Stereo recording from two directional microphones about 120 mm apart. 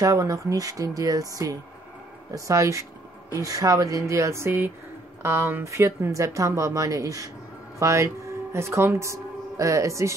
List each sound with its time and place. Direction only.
0.0 s speech: 25° right (ahead or behind)